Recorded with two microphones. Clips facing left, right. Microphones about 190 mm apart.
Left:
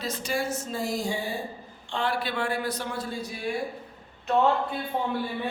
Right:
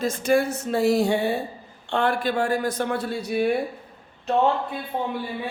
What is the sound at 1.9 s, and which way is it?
A man's voice, 55° right (ahead or behind).